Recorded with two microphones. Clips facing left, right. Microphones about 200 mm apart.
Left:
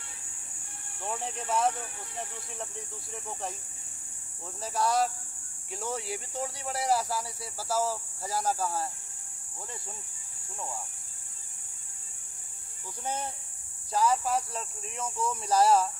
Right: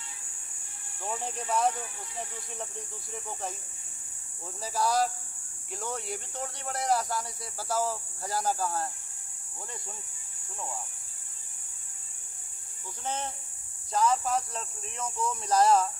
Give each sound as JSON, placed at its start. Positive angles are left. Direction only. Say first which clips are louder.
{"t": 1.0, "sound": "speech", "louder": "even", "side_deg": 0}
{"t": 4.6, "sound": "speech", "louder": "even", "side_deg": 0}
{"t": 13.0, "sound": "speech", "louder": "even", "side_deg": 10}